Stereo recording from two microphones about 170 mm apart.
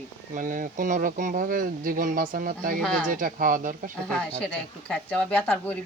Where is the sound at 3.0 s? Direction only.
55° right (ahead or behind).